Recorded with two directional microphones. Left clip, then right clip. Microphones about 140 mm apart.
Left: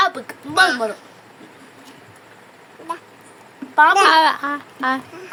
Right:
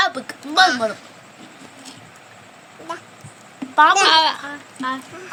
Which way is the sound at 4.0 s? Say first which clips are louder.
Left 2 dB; 45° left (ahead or behind).